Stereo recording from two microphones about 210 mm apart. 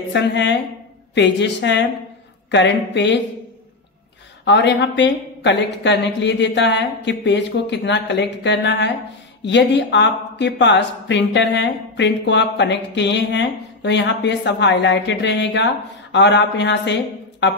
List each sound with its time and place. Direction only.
0.1 s speech: 55° left (ahead or behind)
4.5 s speech: 55° left (ahead or behind)